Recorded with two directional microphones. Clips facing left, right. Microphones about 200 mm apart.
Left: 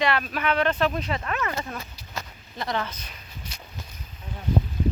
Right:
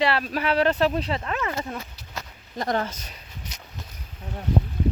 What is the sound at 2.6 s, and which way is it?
Speech, 40° right (ahead or behind).